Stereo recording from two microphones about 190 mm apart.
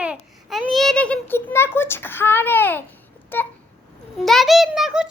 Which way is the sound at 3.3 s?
10° left (ahead or behind).